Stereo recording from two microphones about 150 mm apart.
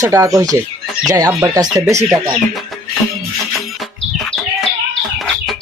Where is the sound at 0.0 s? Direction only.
20° right (ahead or behind).